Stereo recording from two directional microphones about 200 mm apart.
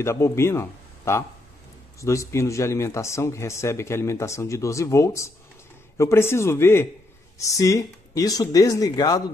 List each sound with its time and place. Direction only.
0.0 s a man's voice: 15° left (ahead or behind)